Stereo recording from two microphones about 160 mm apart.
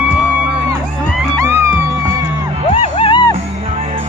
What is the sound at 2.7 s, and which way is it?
Music, 35° left (ahead or behind).